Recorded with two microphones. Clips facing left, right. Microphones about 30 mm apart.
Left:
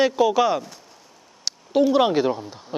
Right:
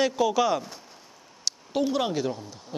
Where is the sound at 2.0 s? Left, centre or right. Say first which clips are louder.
Left 8 dB; left.